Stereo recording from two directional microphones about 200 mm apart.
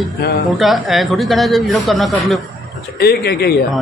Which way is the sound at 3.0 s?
50° left (ahead or behind).